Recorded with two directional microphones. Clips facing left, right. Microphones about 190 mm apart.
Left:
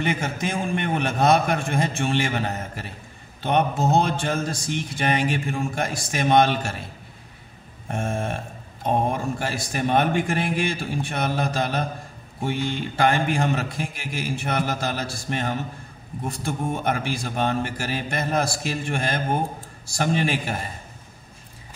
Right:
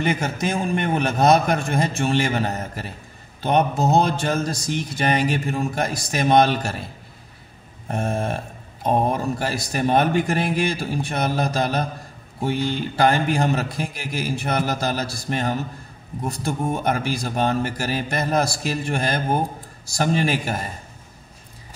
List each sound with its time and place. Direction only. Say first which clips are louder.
0.0 s speech: right 3 dB; 40° right (ahead or behind)
7.9 s speech: right 3 dB; 40° right (ahead or behind)